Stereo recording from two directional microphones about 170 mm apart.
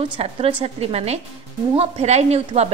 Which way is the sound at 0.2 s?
35° right (ahead or behind).